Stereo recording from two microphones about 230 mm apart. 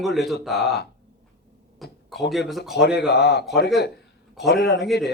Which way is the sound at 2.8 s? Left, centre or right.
Left.